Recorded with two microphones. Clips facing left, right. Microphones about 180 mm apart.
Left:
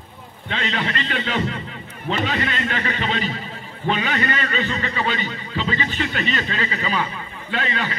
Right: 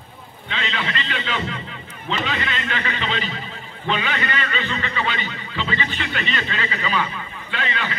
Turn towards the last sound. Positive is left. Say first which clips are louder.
# left 2 dB
turn(degrees=40)  # may be behind; listen again after turning